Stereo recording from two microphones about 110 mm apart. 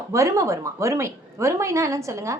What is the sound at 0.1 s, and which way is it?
A woman's voice, 30° right (ahead or behind).